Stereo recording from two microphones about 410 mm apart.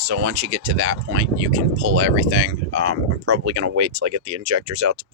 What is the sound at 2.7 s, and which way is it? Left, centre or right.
Speech, right.